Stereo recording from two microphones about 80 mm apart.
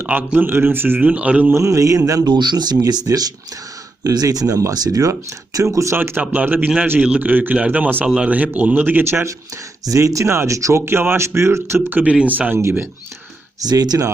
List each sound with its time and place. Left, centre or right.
0.0 s speech: right
1.1 s a sound: centre
1.5 s speech: right
2.2 s speech: right
2.8 s speech: right
6.0 s speech: right
8.0 s a sound: centre
8.3 s speech: centre
9.8 s speech: right
13.6 s speech: right